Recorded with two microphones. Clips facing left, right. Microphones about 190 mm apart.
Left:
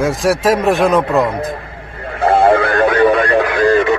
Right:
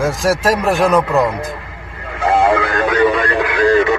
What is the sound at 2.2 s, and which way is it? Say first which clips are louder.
Radio: left 3 dB; 30° left (ahead or behind).